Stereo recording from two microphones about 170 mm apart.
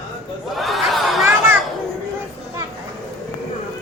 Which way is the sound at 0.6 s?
Centre (ahead or behind).